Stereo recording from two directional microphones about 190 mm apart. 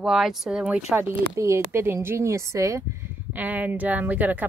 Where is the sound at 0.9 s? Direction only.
15° right (ahead or behind).